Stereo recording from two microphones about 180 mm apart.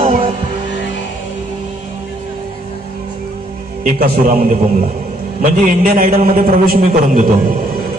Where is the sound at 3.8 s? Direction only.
55° right (ahead or behind).